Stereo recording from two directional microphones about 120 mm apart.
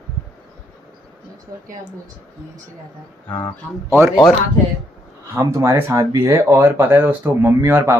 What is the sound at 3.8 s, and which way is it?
Speech, 20° right (ahead or behind).